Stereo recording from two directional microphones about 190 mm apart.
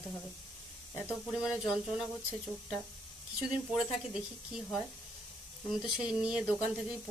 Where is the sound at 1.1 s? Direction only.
5° right (ahead or behind).